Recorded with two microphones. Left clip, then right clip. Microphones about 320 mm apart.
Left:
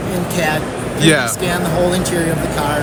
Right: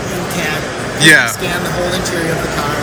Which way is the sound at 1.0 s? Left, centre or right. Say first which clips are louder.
Right 6 dB; centre.